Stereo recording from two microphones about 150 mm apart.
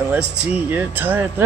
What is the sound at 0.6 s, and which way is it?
Speech, 10° right (ahead or behind).